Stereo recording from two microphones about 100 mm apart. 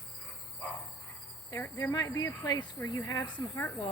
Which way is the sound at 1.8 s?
35° left (ahead or behind).